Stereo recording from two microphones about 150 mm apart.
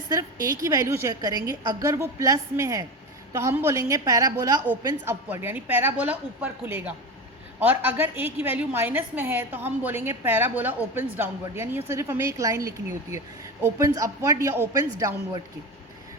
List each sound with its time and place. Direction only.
0.1 s a woman's voice: 20° right (ahead or behind)